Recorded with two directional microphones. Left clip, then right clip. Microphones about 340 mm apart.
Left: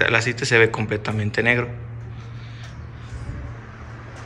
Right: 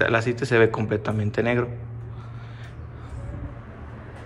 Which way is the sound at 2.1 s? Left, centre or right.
Centre.